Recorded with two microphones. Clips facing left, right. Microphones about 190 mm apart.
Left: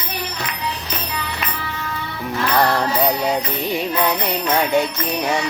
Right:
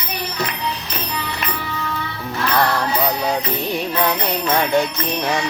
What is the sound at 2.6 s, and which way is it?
Jingle bell, 20° left (ahead or behind).